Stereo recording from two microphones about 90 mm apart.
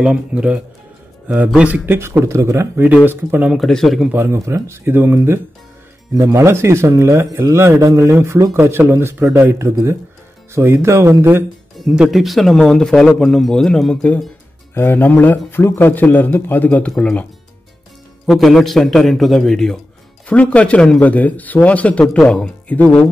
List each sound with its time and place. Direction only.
0.0 s a man's voice: 10° right (ahead or behind)
3.5 s speech: 5° left (ahead or behind)
4.1 s a man's voice: 30° right (ahead or behind)
11.8 s speech: 5° right (ahead or behind)
14.7 s speech: 25° left (ahead or behind)
18.2 s speech: centre (ahead or behind)